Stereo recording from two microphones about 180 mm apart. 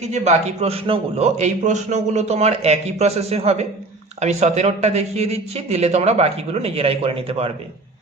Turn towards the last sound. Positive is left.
turn(degrees=-30)  # may be behind; listen again after turning